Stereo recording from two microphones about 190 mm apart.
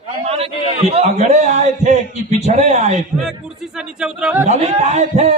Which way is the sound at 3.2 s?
5° right (ahead or behind).